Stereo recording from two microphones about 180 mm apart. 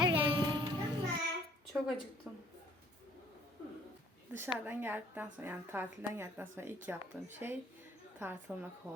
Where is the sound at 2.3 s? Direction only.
5° right (ahead or behind).